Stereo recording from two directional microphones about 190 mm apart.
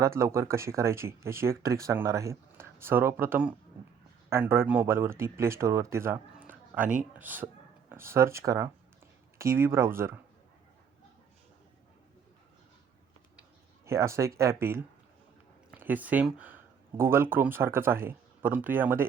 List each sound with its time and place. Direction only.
0.0 s speech: 15° right (ahead or behind)
13.8 s speech: 15° right (ahead or behind)